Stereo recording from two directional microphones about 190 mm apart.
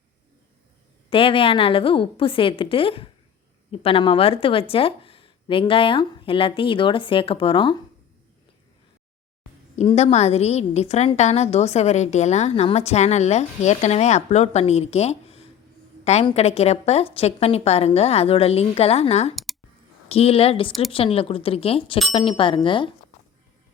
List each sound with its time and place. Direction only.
1.1 s a woman's voice: 30° left (ahead or behind)
9.7 s a woman's voice: 35° left (ahead or behind)